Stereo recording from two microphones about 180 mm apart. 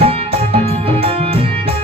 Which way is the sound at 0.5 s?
35° right (ahead or behind).